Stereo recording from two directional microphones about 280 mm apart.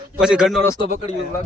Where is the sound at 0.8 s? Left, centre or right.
Left.